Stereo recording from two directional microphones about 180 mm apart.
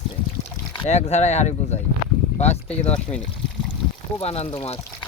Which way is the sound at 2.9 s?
5° left (ahead or behind).